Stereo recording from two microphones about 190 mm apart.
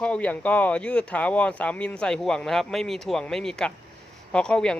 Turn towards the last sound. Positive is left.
turn(degrees=5)  # may be behind; listen again after turning